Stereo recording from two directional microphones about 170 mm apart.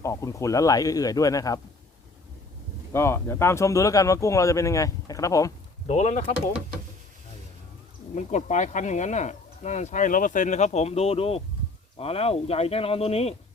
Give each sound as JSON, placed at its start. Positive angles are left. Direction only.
{"t": 0.0, "sound": "speech", "side_deg": 20}
{"t": 2.9, "sound": "speech", "side_deg": 15}
{"t": 5.9, "sound": "speech", "side_deg": 40}
{"t": 8.1, "sound": "speech", "side_deg": 45}